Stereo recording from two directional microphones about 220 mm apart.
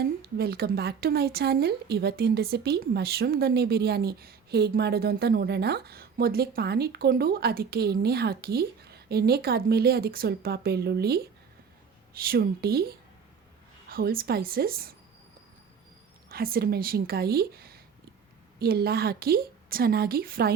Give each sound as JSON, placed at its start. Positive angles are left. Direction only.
{"t": 0.2, "sound": "a woman's voice", "side_deg": -45}
{"t": 16.3, "sound": "a woman's voice", "side_deg": -40}